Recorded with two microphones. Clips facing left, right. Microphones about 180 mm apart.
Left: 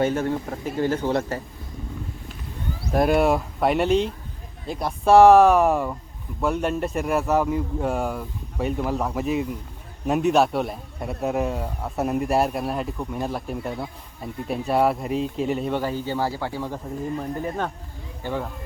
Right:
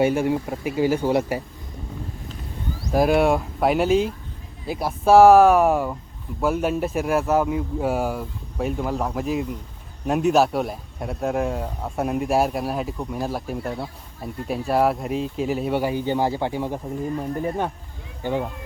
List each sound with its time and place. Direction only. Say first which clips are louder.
0.0 s speech: right 3 dB; 10° right (ahead or behind)
2.9 s a man's voice: right 1 dB; centre (ahead or behind); by 18.4 s 15° right (ahead or behind)